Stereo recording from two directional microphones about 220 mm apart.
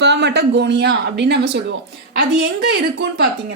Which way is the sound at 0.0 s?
50° right (ahead or behind).